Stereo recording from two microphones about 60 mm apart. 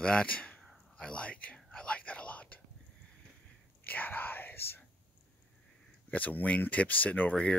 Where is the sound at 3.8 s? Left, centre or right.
Left.